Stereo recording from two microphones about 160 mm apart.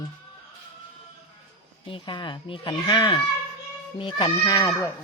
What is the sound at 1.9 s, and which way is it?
Speech, 30° left (ahead or behind).